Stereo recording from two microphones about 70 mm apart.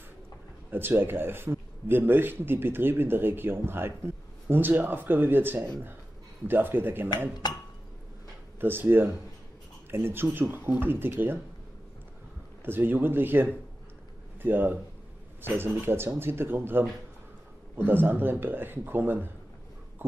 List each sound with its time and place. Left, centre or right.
0.7 s a man's voice: right
7.4 s dishes: left
8.5 s a man's voice: right
12.6 s a man's voice: right
20.0 s a sound: right